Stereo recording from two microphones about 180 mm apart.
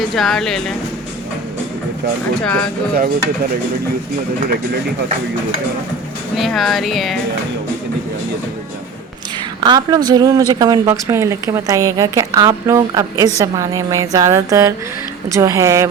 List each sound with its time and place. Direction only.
0.2 s speech: centre (ahead or behind)
2.4 s speech: 5° left (ahead or behind)
6.3 s speech: centre (ahead or behind)
9.6 s speech: 25° right (ahead or behind)